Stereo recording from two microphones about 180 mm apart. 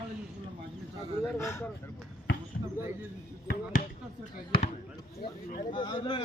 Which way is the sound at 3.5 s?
50° left (ahead or behind).